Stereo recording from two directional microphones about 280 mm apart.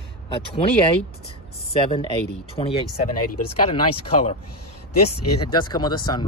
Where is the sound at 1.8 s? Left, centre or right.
Centre.